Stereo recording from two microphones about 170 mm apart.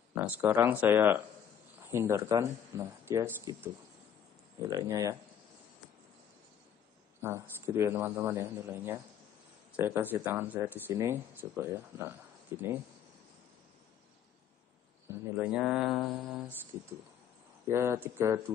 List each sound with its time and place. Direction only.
0.1 s speech: 10° right (ahead or behind)
7.2 s speech: 15° right (ahead or behind)
15.0 s speech: 5° right (ahead or behind)
17.6 s speech: 15° right (ahead or behind)